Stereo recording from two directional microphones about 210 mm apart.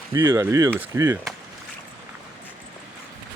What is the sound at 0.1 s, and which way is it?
Speech, 15° right (ahead or behind).